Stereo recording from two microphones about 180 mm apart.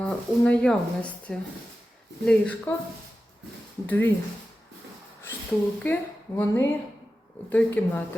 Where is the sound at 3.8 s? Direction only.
10° left (ahead or behind).